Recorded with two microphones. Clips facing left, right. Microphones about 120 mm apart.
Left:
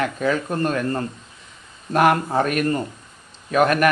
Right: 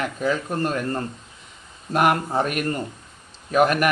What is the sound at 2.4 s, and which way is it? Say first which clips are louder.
Speech: left 3 dB; 20° right (ahead or behind).